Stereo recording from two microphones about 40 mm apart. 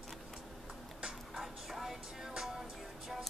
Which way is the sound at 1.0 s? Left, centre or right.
Centre.